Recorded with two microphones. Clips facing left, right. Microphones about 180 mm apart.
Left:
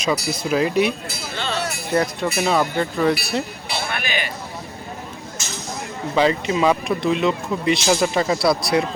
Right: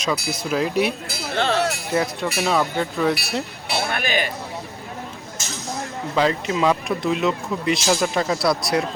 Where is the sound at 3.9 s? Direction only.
45° right (ahead or behind).